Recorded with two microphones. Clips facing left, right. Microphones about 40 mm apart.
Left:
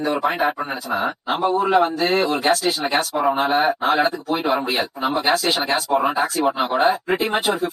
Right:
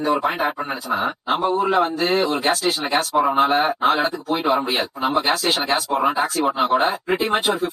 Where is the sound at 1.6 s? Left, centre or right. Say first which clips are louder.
Left 1 dB; centre.